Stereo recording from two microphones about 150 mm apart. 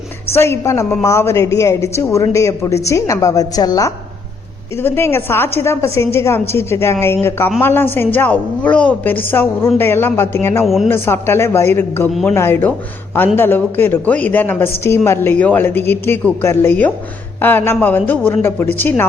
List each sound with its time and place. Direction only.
0.3 s a woman's voice: 15° left (ahead or behind)